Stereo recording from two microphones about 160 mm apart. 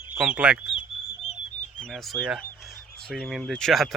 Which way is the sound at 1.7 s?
5° left (ahead or behind).